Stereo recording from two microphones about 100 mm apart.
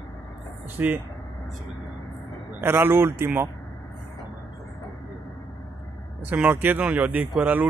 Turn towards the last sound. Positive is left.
turn(degrees=-15)  # may be behind; listen again after turning